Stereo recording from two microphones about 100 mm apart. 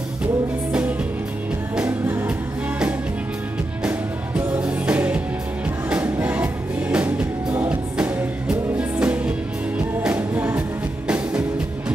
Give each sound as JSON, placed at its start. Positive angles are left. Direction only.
{"t": 1.8, "sound": "music", "side_deg": -15}
{"t": 4.6, "sound": "music", "side_deg": -10}